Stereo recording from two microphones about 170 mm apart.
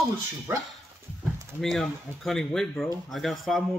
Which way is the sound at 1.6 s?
Centre (ahead or behind).